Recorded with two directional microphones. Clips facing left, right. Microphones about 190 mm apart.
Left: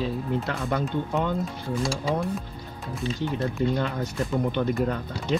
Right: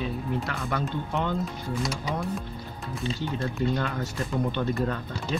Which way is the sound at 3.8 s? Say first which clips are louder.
Left 2 dB; 15° left (ahead or behind).